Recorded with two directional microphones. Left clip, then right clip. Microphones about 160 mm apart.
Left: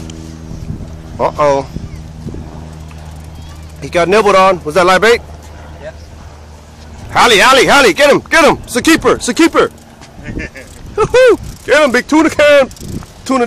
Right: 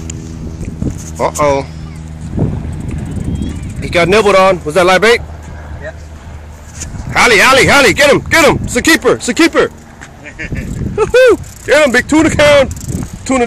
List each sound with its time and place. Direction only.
1.1 s speech: 5° left (ahead or behind)
3.8 s speech: centre (ahead or behind)
7.1 s speech: 10° left (ahead or behind)
9.2 s speech: 20° left (ahead or behind)
10.2 s vehicle: 35° left (ahead or behind)
11.0 s speech: 5° left (ahead or behind)